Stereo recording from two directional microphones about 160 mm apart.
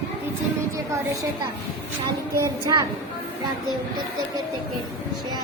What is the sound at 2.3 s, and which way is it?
Child singing, 20° right (ahead or behind).